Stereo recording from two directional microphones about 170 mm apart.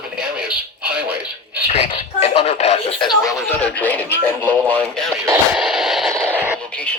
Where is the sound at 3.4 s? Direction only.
10° left (ahead or behind).